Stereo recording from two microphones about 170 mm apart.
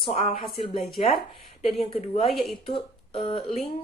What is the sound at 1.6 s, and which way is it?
Speech, 35° left (ahead or behind).